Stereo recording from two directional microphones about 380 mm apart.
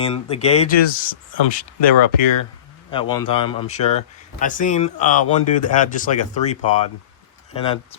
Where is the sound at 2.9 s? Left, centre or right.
Centre.